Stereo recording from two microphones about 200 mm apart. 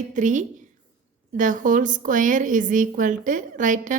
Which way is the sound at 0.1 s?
40° right (ahead or behind).